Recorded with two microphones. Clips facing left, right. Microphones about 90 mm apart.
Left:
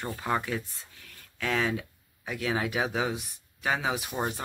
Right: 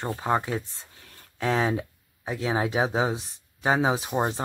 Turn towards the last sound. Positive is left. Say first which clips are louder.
# right 5 dB
turn(degrees=-35)  # may be behind; listen again after turning